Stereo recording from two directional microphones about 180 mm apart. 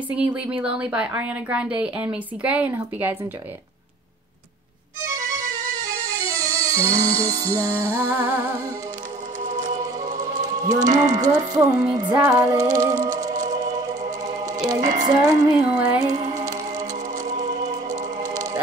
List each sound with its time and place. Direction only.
0.2 s speech: 5° right (ahead or behind)
5.7 s music: 20° right (ahead or behind)
9.4 s music: 45° right (ahead or behind)
10.6 s speech: 20° right (ahead or behind)
10.9 s speech: 45° right (ahead or behind)
12.1 s music: 15° right (ahead or behind)
13.3 s music: 45° right (ahead or behind)
13.7 s music: 20° right (ahead or behind)
15.7 s speech: 5° right (ahead or behind)
16.0 s music: 25° right (ahead or behind)
17.2 s music: 45° right (ahead or behind)
18.3 s music: 20° right (ahead or behind)